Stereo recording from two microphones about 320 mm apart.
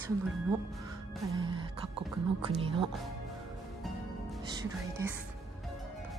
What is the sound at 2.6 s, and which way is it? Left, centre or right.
Music, centre.